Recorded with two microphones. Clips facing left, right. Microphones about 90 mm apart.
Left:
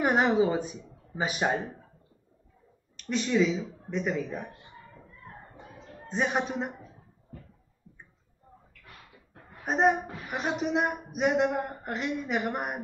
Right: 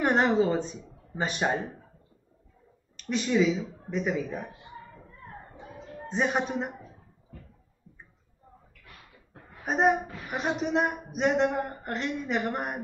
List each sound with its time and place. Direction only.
0.0 s a woman's voice: 5° left (ahead or behind)
3.0 s a woman's voice: centre (ahead or behind)
4.9 s a sound: 40° right (ahead or behind)
6.0 s a woman's voice: centre (ahead or behind)
9.6 s a woman's voice: centre (ahead or behind)